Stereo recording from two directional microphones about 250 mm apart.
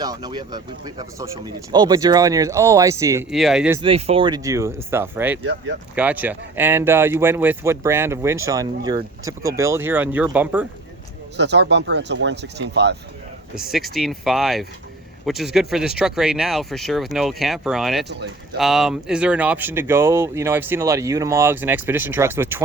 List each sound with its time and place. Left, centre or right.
0.0 s speech: centre
3.8 s speech: right; by 10.7 s centre
11.3 s speech: right
13.6 s speech: centre